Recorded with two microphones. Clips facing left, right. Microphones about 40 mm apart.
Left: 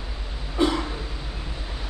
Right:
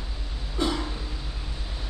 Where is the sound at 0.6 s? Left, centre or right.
Left.